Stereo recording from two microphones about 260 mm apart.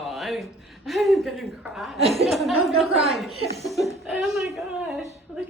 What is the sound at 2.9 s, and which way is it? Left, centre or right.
Speech, right.